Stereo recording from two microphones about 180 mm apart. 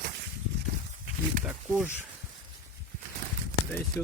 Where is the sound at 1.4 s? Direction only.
10° right (ahead or behind).